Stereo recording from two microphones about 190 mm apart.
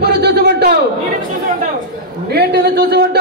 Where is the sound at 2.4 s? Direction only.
55° right (ahead or behind).